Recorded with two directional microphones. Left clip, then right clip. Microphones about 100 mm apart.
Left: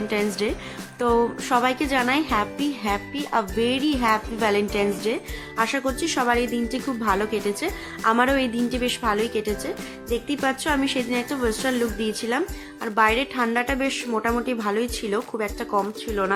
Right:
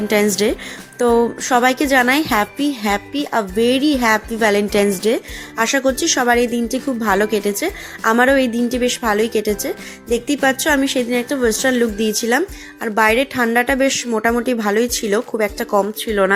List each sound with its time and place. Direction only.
0.1 s a woman's voice: 70° right (ahead or behind)
0.9 s a woman's voice: 45° right (ahead or behind)
1.5 s a woman's voice: 55° right (ahead or behind)
10.8 s a woman's voice: 45° right (ahead or behind)